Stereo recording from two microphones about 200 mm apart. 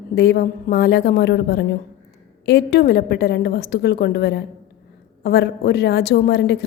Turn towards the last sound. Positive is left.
turn(degrees=55)  # may be behind; listen again after turning